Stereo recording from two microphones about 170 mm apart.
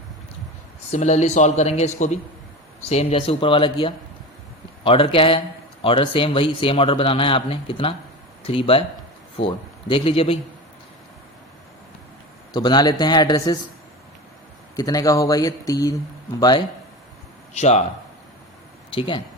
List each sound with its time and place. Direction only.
0.9 s a man's voice: 40° left (ahead or behind)
9.9 s a man's voice: 30° left (ahead or behind)
12.5 s speech: 25° left (ahead or behind)
14.8 s speech: 20° left (ahead or behind)
17.5 s a man's voice: 40° left (ahead or behind)
18.9 s speech: 30° left (ahead or behind)